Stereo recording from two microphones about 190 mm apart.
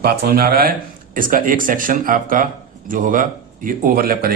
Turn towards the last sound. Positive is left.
turn(degrees=-50)  # may be behind; listen again after turning